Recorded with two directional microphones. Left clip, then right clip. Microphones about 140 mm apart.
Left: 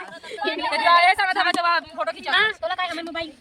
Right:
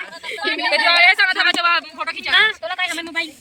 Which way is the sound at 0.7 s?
65° left (ahead or behind).